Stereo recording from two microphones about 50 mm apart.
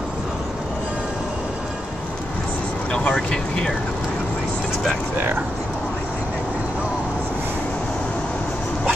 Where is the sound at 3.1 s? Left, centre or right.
Centre.